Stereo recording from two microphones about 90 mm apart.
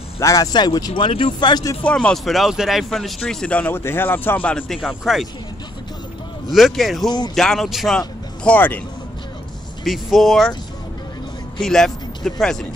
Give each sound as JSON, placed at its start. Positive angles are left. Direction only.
{"t": 0.2, "sound": "speech", "side_deg": 40}
{"t": 1.0, "sound": "speech", "side_deg": 75}
{"t": 1.5, "sound": "speech", "side_deg": 50}
{"t": 2.0, "sound": "speech", "side_deg": 0}
{"t": 4.7, "sound": "speech", "side_deg": 0}
{"t": 6.5, "sound": "speech", "side_deg": 0}
{"t": 8.5, "sound": "speech", "side_deg": 20}
{"t": 9.8, "sound": "speech", "side_deg": 0}
{"t": 11.6, "sound": "speech", "side_deg": 5}